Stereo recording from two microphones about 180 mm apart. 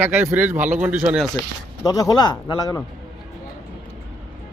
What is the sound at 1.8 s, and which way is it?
Speech, 20° left (ahead or behind).